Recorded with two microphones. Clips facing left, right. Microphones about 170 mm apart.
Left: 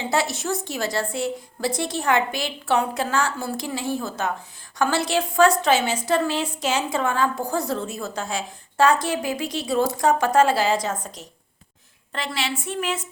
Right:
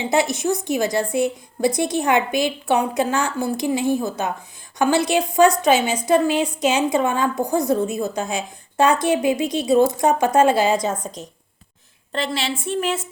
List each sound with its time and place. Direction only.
0.0 s a woman's voice: 15° right (ahead or behind)